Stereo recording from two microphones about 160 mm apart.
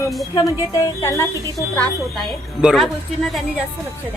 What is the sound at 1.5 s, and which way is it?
Speech, 5° left (ahead or behind).